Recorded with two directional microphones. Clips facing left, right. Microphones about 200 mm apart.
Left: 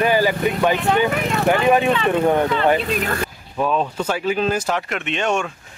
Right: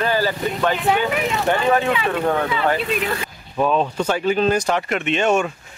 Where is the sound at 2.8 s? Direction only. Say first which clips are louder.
Even; 40° left (ahead or behind).